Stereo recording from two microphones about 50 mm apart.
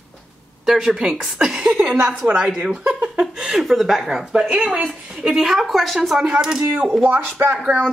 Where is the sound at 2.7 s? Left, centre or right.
Right.